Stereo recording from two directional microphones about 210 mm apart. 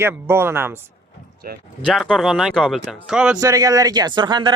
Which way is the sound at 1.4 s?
45° right (ahead or behind).